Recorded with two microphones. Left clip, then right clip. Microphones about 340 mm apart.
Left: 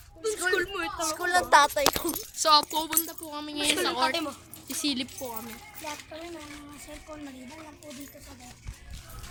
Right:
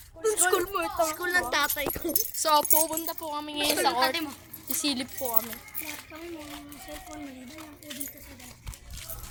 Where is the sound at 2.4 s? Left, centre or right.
Centre.